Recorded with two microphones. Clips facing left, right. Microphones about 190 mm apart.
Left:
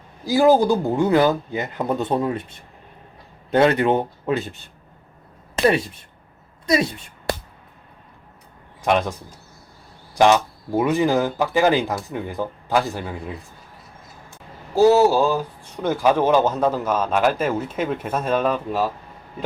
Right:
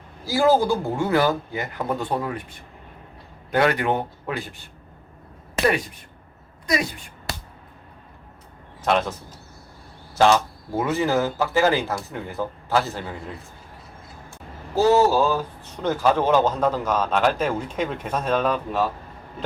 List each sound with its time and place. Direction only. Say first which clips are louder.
0.3 s speech: left 3 dB; 15° left (ahead or behind)
3.5 s speech: left 4 dB; 25° left (ahead or behind)
5.6 s speech: left 4 dB; 25° left (ahead or behind)
8.8 s a man's voice: left 2 dB; 15° left (ahead or behind)
10.2 s speech: left 2 dB; 15° left (ahead or behind)
14.8 s speech: left 3 dB; 10° left (ahead or behind)